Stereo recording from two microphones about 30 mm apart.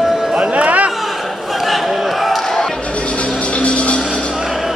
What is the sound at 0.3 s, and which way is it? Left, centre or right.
Music, right.